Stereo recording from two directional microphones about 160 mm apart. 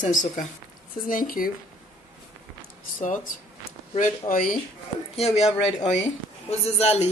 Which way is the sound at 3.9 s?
55° left (ahead or behind).